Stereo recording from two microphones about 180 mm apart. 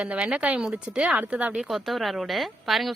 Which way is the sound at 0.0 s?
5° right (ahead or behind).